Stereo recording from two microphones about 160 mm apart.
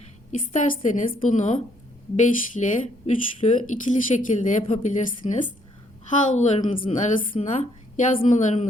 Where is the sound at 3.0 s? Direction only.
45° left (ahead or behind).